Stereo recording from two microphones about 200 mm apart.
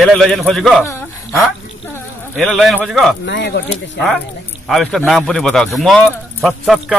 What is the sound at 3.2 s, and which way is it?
Speech, 65° left (ahead or behind).